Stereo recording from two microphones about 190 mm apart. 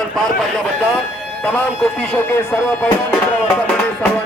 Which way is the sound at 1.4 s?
5° left (ahead or behind).